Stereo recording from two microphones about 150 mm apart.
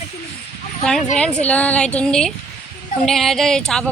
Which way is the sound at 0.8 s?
5° left (ahead or behind).